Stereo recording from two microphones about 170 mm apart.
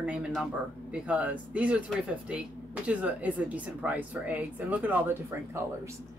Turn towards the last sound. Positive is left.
turn(degrees=-10)  # may be behind; listen again after turning